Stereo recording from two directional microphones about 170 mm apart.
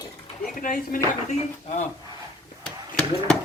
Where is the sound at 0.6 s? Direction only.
50° left (ahead or behind).